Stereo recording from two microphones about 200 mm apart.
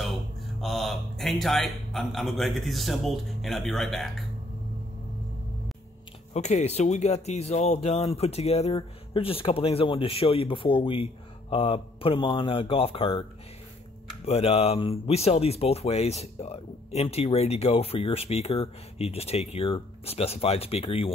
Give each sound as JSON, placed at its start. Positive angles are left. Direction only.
{"t": 0.6, "sound": "speech", "side_deg": 0}
{"t": 6.3, "sound": "speech", "side_deg": 35}
{"t": 14.2, "sound": "speech", "side_deg": 30}